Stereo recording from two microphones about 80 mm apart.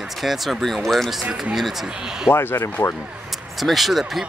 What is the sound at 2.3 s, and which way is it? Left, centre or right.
Speech, left.